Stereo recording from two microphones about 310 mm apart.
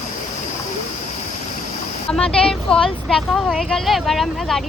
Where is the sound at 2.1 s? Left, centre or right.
Centre.